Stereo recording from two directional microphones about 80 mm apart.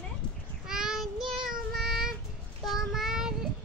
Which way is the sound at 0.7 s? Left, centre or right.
Centre.